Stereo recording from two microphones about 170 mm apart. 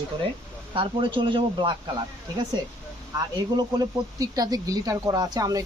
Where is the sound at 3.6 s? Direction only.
20° right (ahead or behind).